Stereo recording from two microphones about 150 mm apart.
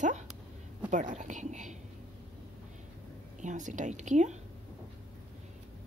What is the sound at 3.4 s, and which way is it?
Speech, 55° right (ahead or behind).